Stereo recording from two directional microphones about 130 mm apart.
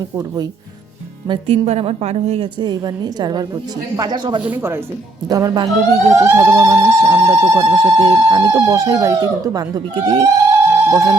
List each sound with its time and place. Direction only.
1.3 s a woman's voice: 45° right (ahead or behind)
2.6 s a woman's voice: 35° right (ahead or behind)
4.4 s speech: 15° right (ahead or behind)
5.3 s speech: 30° right (ahead or behind)